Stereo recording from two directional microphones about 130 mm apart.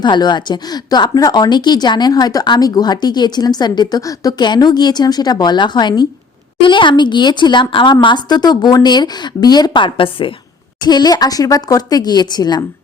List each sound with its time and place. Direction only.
0.0 s a woman's voice: 35° left (ahead or behind)
10.8 s a woman's voice: 30° left (ahead or behind)